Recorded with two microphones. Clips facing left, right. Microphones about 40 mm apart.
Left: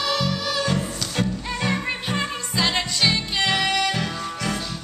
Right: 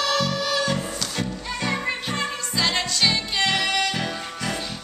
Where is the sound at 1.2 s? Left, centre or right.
Centre.